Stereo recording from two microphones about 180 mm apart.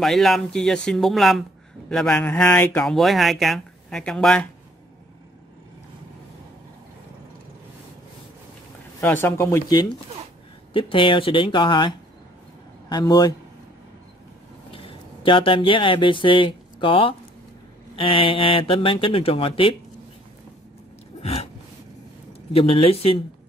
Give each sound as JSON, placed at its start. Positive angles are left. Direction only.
{"t": 0.0, "sound": "speech", "side_deg": 0}
{"t": 9.0, "sound": "speech", "side_deg": 10}
{"t": 12.9, "sound": "speech", "side_deg": 20}
{"t": 14.7, "sound": "speech", "side_deg": 30}
{"t": 21.2, "sound": "a sound", "side_deg": 35}
{"t": 22.5, "sound": "speech", "side_deg": 35}